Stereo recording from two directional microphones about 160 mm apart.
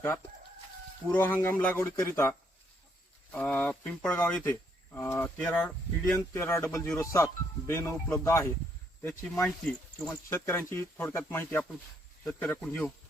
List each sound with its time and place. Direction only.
1.1 s speech: 15° left (ahead or behind)
3.3 s speech: 10° left (ahead or behind)